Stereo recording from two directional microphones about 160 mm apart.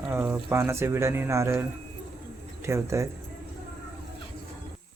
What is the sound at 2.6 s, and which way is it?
Speech, 15° right (ahead or behind).